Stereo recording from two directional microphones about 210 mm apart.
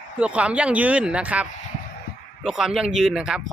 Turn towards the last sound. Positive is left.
turn(degrees=-5)  # may be behind; listen again after turning